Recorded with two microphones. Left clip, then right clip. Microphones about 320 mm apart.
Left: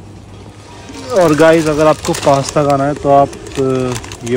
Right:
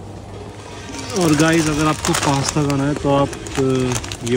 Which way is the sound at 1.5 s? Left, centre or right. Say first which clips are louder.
Left 7 dB; centre.